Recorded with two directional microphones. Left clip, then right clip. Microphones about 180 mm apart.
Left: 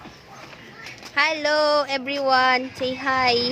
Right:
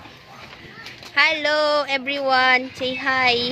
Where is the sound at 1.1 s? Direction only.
5° left (ahead or behind).